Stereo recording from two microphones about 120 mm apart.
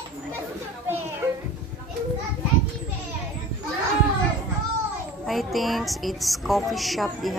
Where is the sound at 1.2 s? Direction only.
15° right (ahead or behind).